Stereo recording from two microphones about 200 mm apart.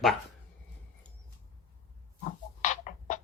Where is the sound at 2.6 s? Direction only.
40° left (ahead or behind).